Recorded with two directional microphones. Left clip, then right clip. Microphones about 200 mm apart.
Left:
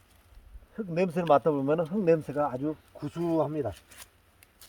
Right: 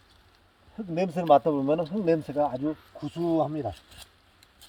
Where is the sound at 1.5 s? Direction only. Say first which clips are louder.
Right 1 dB; 15° left (ahead or behind).